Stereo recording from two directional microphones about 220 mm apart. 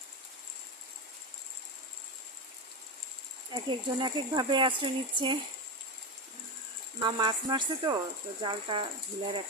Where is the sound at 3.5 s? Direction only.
20° right (ahead or behind).